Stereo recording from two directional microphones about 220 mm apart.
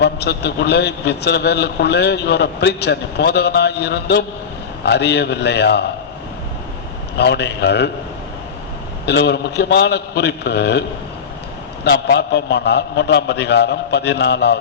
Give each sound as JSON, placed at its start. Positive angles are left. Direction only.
{"t": 0.0, "sound": "a man's voice", "side_deg": 50}
{"t": 7.2, "sound": "a man's voice", "side_deg": 50}
{"t": 9.0, "sound": "a man's voice", "side_deg": 50}
{"t": 11.9, "sound": "a man's voice", "side_deg": 50}